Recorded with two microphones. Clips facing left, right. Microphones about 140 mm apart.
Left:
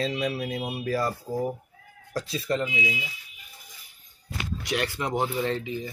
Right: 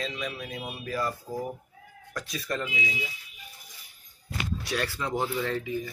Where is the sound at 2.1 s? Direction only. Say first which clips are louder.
Left 5 dB; 30° left (ahead or behind).